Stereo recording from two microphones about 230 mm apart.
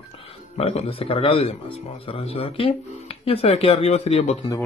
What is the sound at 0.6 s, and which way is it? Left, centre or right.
Speech, left.